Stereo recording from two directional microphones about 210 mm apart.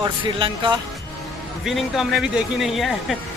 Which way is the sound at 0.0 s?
25° right (ahead or behind).